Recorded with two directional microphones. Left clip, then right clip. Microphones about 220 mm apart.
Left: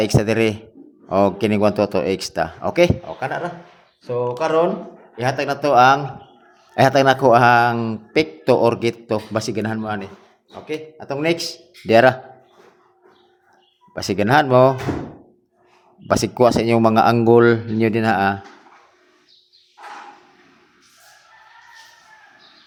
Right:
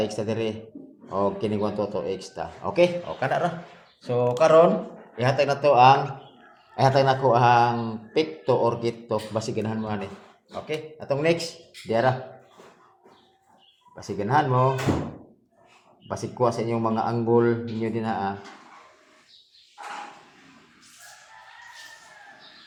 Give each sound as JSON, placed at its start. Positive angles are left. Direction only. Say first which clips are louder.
{"t": 0.0, "sound": "a man's voice", "louder": "left 9 dB", "side_deg": 35}
{"t": 3.2, "sound": "speech", "louder": "even", "side_deg": 0}
{"t": 5.1, "sound": "a man's voice", "louder": "left 1 dB", "side_deg": 15}
{"t": 11.9, "sound": "a man's voice", "louder": "left 10 dB", "side_deg": 40}
{"t": 13.9, "sound": "a man's voice", "louder": "left 7 dB", "side_deg": 40}
{"t": 16.0, "sound": "speech", "louder": "left 9 dB", "side_deg": 45}